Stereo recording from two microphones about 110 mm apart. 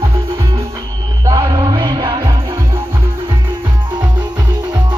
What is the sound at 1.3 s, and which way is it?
Music, 45° right (ahead or behind).